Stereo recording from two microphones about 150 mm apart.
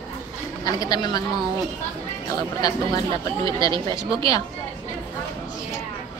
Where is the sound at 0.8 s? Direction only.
25° left (ahead or behind).